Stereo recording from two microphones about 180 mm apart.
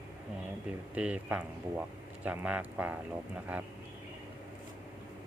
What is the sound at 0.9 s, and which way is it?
Speech, 5° right (ahead or behind).